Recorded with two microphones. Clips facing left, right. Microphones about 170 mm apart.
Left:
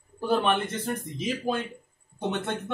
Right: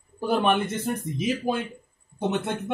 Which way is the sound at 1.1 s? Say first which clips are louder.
Right 2 dB; 10° right (ahead or behind).